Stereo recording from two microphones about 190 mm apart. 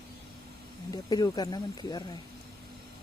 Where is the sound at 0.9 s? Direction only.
20° left (ahead or behind).